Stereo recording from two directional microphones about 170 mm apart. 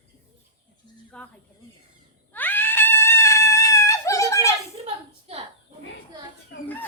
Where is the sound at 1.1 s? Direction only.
5° left (ahead or behind).